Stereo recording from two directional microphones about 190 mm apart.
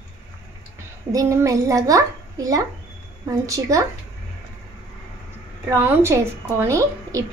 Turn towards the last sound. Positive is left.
turn(degrees=-15)  # may be behind; listen again after turning